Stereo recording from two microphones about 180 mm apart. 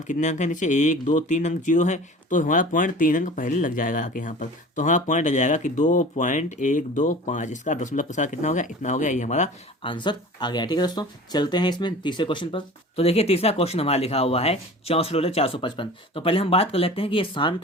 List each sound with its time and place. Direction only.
0.1 s speech: 40° left (ahead or behind)
9.8 s speech: 25° left (ahead or behind)